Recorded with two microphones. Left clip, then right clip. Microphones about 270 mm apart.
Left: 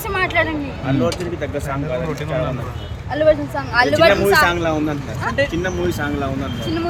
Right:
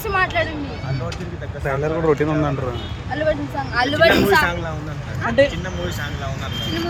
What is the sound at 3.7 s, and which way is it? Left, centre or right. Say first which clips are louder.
Speech: left 3 dB; centre.